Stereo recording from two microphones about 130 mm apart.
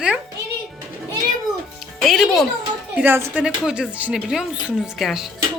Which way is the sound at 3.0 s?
15° right (ahead or behind).